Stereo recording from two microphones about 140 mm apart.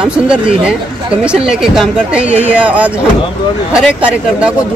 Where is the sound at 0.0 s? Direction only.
5° right (ahead or behind).